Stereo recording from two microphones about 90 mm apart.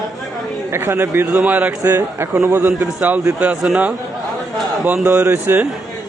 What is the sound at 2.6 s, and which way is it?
A man's voice, 15° right (ahead or behind).